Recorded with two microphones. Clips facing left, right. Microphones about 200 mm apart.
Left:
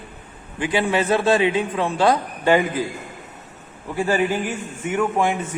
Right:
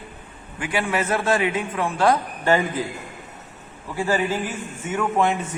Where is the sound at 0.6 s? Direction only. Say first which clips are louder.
Left 4 dB; 25° left (ahead or behind).